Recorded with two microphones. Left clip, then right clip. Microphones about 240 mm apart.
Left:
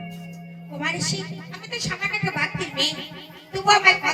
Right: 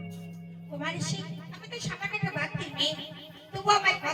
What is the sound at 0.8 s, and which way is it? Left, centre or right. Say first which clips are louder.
Music: left 9 dB; left.